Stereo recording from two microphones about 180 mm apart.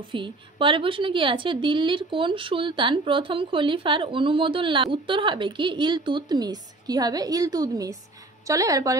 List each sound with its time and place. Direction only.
0.1 s a woman's voice: 30° right (ahead or behind)